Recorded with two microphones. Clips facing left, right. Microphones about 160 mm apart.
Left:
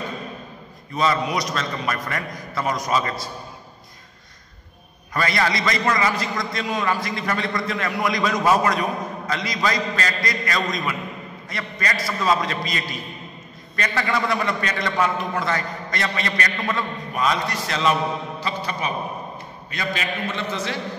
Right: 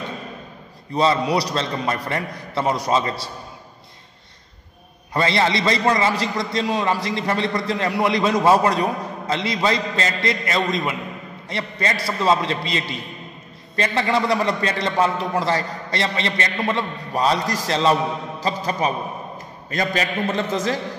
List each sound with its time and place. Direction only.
0.9 s a man's voice: 30° right (ahead or behind)
5.1 s a man's voice: 25° right (ahead or behind); by 20.4 s 40° right (ahead or behind)